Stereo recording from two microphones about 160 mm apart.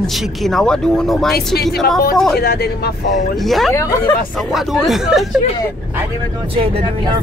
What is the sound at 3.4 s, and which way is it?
Speech, centre (ahead or behind).